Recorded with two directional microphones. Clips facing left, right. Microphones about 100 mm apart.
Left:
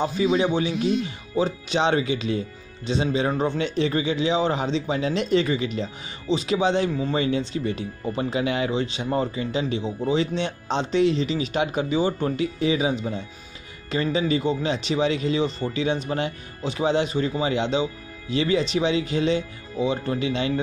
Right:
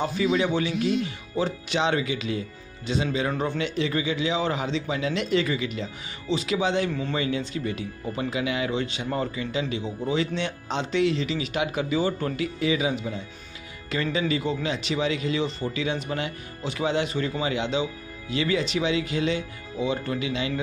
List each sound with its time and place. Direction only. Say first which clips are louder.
0.0 s speech: left 2 dB; 25° left (ahead or behind)
7.2 s speech: left 4 dB; 30° left (ahead or behind)
8.7 s speech: left 3 dB; 25° left (ahead or behind)